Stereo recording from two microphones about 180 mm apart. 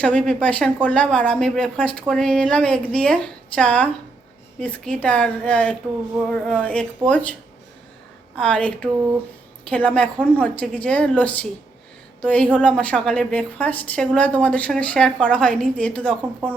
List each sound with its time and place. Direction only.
0.0 s a woman's voice: 5° left (ahead or behind)
8.4 s a woman's voice: 5° left (ahead or behind)